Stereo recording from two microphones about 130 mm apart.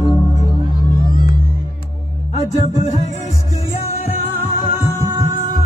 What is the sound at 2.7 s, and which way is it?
Music, 65° left (ahead or behind).